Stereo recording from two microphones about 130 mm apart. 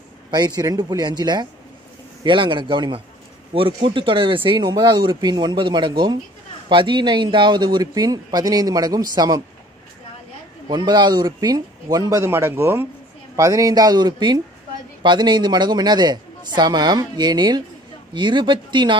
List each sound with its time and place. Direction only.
0.3 s speech: 30° right (ahead or behind)
10.7 s speech: 35° right (ahead or behind)